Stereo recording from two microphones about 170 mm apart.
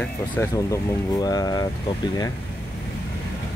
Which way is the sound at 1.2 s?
20° left (ahead or behind).